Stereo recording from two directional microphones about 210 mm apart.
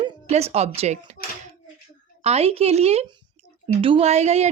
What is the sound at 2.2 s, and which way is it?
Speech, 30° right (ahead or behind).